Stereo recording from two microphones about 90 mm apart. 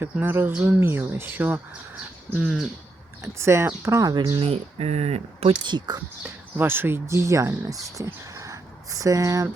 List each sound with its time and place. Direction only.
0.0 s speech: 25° right (ahead or behind)
2.4 s bird: 5° right (ahead or behind)
3.3 s speech: 30° right (ahead or behind)
4.1 s speech: 50° right (ahead or behind)
4.4 s speech: 90° right
6.6 s speech: 25° right (ahead or behind); by 9.5 s 40° right (ahead or behind)